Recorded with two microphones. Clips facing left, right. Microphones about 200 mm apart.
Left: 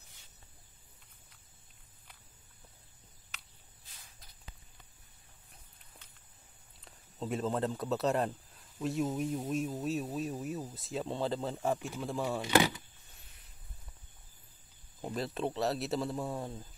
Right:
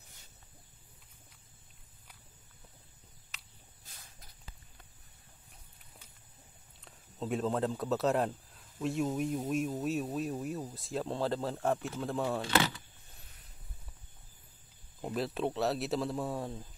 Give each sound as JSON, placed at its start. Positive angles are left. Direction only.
{"t": 6.8, "sound": "speech", "side_deg": 0}
{"t": 12.4, "sound": "speech", "side_deg": 15}
{"t": 15.0, "sound": "speech", "side_deg": 0}